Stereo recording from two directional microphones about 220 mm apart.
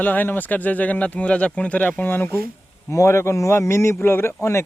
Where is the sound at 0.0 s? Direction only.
10° left (ahead or behind).